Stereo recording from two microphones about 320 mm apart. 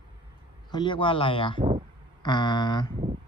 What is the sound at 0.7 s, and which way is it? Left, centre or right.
Speech, centre.